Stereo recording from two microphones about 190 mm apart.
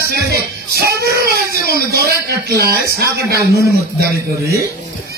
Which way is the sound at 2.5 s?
60° right (ahead or behind).